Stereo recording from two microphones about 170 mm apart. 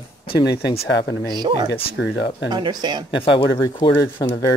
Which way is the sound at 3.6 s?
25° left (ahead or behind).